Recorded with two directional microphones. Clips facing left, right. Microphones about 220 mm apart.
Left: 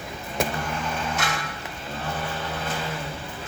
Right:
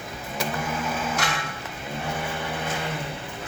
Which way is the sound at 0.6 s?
5° right (ahead or behind).